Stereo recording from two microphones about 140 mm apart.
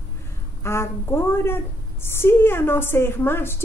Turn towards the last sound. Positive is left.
turn(degrees=15)  # may be behind; listen again after turning